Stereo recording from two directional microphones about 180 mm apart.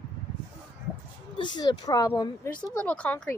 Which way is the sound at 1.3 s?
25° left (ahead or behind).